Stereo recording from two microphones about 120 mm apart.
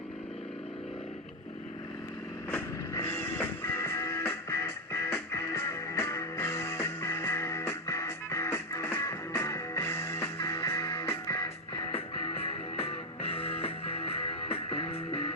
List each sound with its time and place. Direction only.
2.5 s music: 20° left (ahead or behind)
11.9 s music: 50° left (ahead or behind)